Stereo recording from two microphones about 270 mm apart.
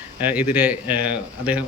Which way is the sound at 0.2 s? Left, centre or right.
Centre.